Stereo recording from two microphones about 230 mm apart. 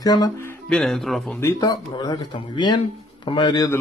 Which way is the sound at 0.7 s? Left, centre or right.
Centre.